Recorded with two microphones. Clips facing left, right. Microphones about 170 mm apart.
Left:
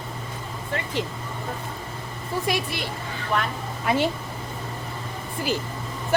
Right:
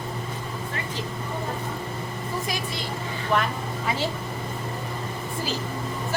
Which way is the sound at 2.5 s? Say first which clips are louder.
Left 4 dB; 65° left (ahead or behind).